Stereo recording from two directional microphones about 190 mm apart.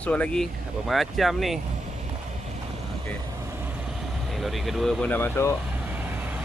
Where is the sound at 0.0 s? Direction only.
5° left (ahead or behind).